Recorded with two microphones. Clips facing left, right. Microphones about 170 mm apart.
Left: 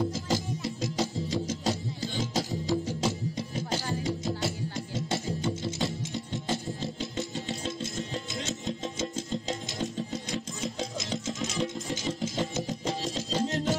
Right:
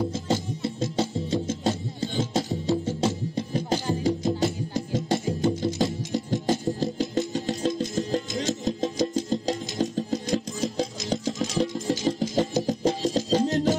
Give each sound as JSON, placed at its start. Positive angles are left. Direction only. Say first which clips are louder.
{"t": 0.3, "sound": "music", "louder": "right 4 dB", "side_deg": -30}
{"t": 4.0, "sound": "music", "louder": "right 7 dB", "side_deg": -35}